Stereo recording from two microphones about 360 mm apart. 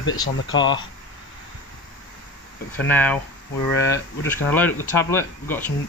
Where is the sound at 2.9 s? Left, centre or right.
Centre.